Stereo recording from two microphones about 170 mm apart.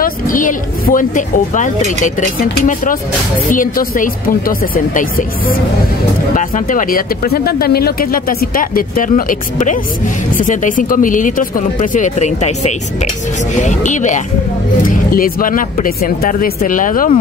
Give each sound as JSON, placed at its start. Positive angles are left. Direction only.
{"t": 0.0, "sound": "speech", "side_deg": 55}